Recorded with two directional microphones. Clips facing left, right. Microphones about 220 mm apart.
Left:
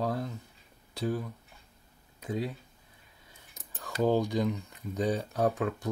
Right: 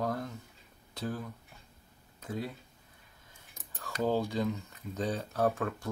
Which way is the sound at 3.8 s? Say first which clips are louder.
Left 4 dB; 15° left (ahead or behind).